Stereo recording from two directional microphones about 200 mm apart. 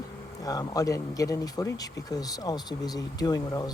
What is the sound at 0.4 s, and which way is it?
Speech, 15° left (ahead or behind).